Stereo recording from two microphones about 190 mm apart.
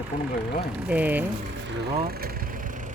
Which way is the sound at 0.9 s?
10° right (ahead or behind).